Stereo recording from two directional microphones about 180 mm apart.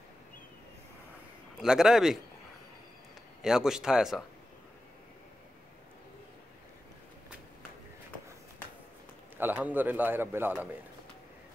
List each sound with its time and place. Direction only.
1.6 s a man's voice: 5° right (ahead or behind)
3.4 s a man's voice: centre (ahead or behind)
9.4 s a man's voice: 10° right (ahead or behind)